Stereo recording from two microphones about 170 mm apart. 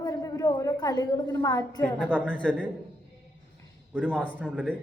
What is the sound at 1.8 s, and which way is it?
Speech, 5° left (ahead or behind).